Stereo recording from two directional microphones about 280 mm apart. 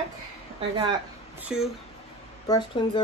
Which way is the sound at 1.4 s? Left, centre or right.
Centre.